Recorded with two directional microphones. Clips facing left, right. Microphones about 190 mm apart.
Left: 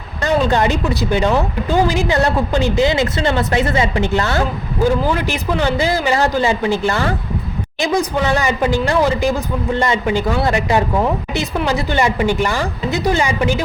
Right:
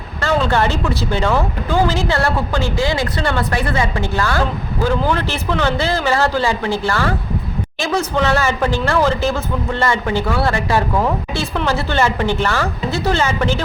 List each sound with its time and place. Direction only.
0.2 s a woman's voice: 20° left (ahead or behind)